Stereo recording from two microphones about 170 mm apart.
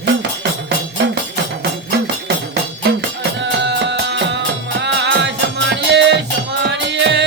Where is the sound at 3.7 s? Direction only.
85° right.